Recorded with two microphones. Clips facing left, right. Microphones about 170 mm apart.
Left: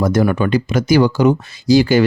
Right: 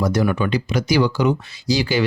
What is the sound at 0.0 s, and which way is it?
Speech, 50° left (ahead or behind).